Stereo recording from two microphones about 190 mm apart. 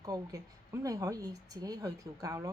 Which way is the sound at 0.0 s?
20° right (ahead or behind).